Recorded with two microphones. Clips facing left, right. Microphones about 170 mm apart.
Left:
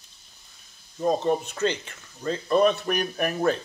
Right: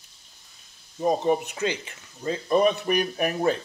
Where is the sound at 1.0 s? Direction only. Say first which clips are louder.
Right 1 dB; 10° right (ahead or behind).